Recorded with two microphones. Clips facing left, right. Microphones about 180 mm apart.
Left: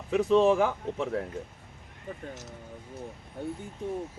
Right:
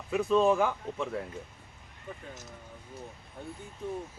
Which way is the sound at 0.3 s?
20° left (ahead or behind).